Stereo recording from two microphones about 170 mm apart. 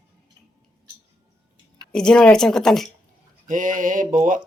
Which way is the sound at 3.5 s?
50° right (ahead or behind).